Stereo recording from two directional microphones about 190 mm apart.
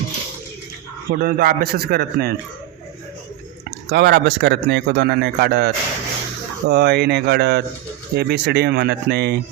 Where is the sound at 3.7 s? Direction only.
60° right (ahead or behind).